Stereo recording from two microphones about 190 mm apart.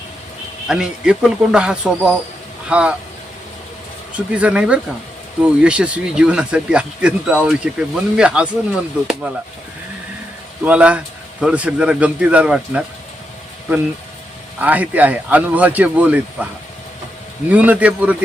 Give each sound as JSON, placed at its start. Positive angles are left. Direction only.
{"t": 0.7, "sound": "speech", "side_deg": -5}
{"t": 4.3, "sound": "speech", "side_deg": -5}
{"t": 10.6, "sound": "speech", "side_deg": -5}
{"t": 14.6, "sound": "speech", "side_deg": -10}
{"t": 17.5, "sound": "speech", "side_deg": -5}